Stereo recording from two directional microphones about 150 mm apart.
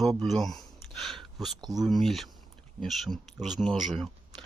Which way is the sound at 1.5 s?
25° right (ahead or behind).